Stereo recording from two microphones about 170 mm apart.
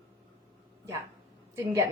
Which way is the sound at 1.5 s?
15° right (ahead or behind).